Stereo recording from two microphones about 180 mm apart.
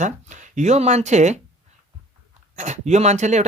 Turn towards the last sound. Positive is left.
turn(degrees=-40)  # may be behind; listen again after turning